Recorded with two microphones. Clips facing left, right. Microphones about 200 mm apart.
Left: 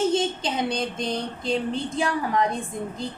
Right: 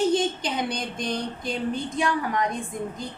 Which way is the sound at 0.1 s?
25° left (ahead or behind).